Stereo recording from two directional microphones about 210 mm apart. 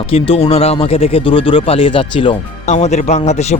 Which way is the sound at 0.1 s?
25° left (ahead or behind).